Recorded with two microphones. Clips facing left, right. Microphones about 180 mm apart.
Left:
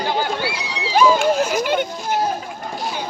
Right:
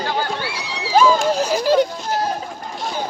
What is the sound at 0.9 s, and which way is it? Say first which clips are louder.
Speech: even; 35° right (ahead or behind).